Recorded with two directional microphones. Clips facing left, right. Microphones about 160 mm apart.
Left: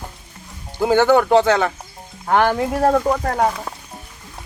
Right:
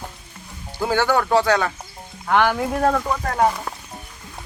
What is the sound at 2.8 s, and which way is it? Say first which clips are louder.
Speech: left 5 dB; 25° left (ahead or behind).